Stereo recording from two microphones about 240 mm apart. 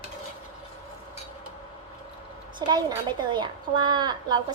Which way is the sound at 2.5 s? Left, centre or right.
Centre.